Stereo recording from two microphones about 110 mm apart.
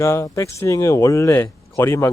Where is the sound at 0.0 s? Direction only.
25° left (ahead or behind).